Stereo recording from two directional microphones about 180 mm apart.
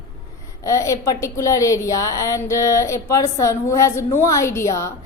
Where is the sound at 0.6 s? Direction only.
15° left (ahead or behind).